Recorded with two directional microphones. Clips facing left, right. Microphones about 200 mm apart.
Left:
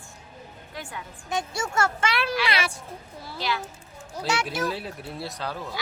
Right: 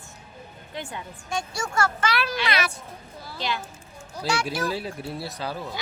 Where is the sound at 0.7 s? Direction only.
20° right (ahead or behind).